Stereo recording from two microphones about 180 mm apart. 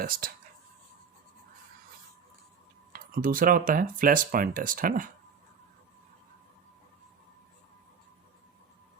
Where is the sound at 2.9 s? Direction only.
55° right (ahead or behind).